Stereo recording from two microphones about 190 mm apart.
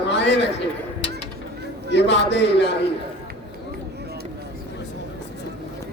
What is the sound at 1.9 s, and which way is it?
Speech, 65° left (ahead or behind).